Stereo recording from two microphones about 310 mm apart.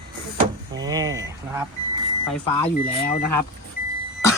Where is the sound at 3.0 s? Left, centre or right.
Left.